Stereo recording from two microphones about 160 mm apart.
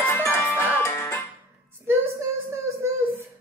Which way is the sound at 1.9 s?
15° right (ahead or behind).